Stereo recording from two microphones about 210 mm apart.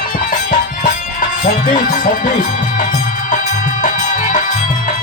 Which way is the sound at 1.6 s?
40° left (ahead or behind).